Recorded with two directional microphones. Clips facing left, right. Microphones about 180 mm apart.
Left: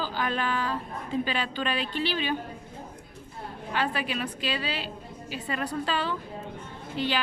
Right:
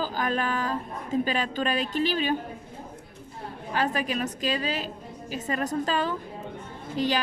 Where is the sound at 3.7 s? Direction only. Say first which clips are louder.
Right 2 dB; 40° right (ahead or behind).